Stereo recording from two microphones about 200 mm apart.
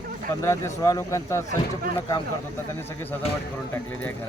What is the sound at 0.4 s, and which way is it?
Speech, 15° left (ahead or behind).